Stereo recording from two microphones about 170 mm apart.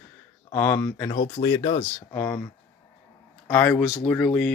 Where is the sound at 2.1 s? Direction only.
10° left (ahead or behind).